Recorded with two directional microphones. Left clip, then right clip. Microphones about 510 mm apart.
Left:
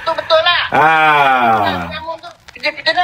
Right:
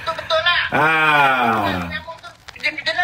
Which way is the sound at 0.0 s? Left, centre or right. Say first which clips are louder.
Left 6 dB; centre.